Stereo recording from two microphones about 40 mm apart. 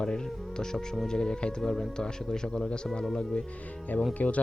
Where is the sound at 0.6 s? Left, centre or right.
Centre.